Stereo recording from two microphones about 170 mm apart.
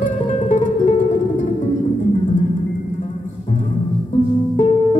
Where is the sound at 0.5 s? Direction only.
50° left (ahead or behind).